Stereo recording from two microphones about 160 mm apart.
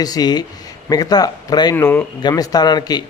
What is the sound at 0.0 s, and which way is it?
Speech, 25° left (ahead or behind).